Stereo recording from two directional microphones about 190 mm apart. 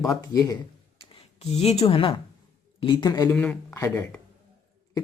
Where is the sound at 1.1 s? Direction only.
35° left (ahead or behind).